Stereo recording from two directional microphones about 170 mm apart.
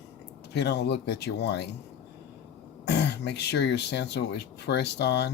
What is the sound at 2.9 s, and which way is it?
Speech, 90° left.